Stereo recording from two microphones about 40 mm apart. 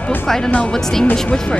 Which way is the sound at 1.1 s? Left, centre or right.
Left.